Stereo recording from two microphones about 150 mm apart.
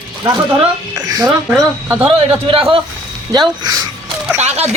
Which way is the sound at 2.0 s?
35° right (ahead or behind).